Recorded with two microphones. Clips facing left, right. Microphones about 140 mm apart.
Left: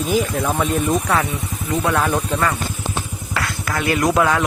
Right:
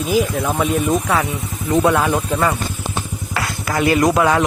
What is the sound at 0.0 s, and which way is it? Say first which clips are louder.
Speech: right 1 dB; centre (ahead or behind).